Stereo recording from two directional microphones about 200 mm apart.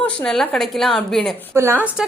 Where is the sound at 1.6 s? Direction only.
10° right (ahead or behind).